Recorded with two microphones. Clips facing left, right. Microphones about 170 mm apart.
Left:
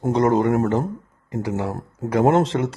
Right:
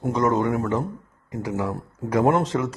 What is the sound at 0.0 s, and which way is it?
Speech, 30° left (ahead or behind).